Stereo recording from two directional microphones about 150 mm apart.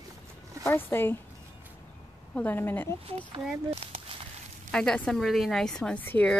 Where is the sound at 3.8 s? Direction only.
40° right (ahead or behind).